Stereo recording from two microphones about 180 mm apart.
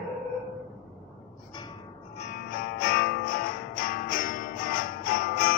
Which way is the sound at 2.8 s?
55° left (ahead or behind).